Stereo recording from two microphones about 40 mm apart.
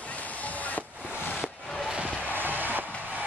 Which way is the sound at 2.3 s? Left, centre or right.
Right.